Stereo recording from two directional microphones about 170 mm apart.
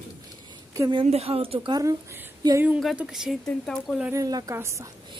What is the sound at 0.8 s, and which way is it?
A woman's voice, 30° right (ahead or behind).